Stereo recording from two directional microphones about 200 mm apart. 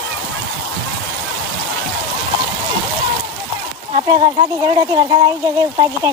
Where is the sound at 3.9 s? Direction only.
25° right (ahead or behind).